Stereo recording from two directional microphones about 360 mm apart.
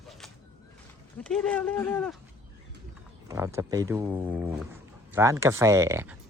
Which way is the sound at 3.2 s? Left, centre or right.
Centre.